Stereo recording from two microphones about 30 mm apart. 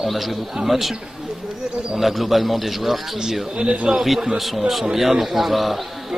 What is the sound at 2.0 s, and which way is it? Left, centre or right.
Speech, centre.